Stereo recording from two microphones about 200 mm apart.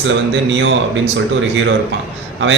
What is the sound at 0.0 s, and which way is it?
A man's voice, 65° right (ahead or behind).